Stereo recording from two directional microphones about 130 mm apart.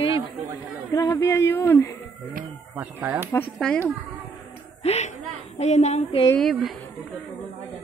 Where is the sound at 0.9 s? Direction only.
30° left (ahead or behind).